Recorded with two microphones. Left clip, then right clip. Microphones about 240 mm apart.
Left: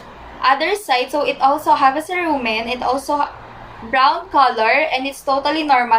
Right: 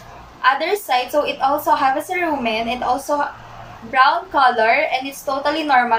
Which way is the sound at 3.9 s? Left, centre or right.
Centre.